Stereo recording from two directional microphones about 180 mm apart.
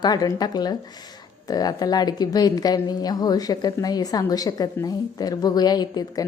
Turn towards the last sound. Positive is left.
turn(degrees=20)  # may be behind; listen again after turning